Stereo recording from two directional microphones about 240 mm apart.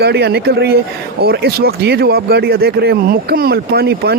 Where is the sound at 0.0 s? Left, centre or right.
Right.